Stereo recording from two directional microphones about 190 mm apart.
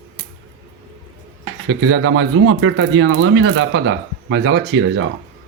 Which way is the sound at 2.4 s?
90° right.